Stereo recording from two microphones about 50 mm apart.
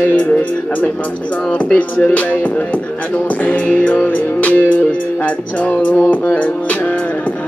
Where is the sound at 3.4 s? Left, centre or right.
Left.